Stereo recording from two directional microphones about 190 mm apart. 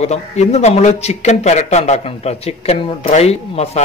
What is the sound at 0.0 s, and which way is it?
Speech, 35° left (ahead or behind).